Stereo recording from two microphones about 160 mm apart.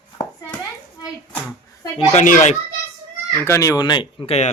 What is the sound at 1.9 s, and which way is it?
Speech, 50° left (ahead or behind).